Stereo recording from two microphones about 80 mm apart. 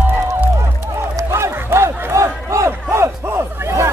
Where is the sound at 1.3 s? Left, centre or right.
Right.